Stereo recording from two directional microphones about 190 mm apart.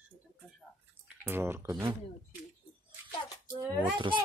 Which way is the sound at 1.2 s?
10° right (ahead or behind).